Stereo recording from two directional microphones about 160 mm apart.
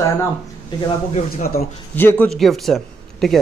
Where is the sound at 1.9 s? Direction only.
10° left (ahead or behind).